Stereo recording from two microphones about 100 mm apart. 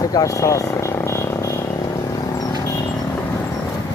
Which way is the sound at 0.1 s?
35° left (ahead or behind).